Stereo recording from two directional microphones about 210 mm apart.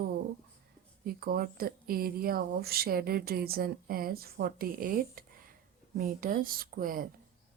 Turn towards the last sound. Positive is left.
turn(degrees=-40)  # may be behind; listen again after turning